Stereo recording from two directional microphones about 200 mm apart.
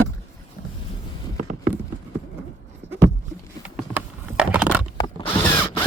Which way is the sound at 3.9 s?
5° right (ahead or behind).